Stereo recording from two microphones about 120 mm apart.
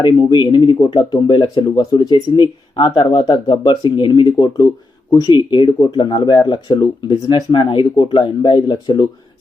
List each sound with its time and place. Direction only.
0.0 s speech: 40° left (ahead or behind)